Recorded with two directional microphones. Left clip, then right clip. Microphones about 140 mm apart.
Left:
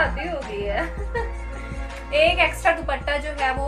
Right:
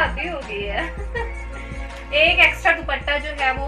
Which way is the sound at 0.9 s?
Centre (ahead or behind).